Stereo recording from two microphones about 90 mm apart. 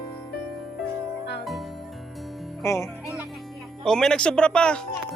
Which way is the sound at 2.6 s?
35° left (ahead or behind).